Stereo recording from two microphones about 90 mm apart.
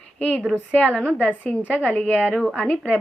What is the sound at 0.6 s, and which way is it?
Speech, 15° left (ahead or behind).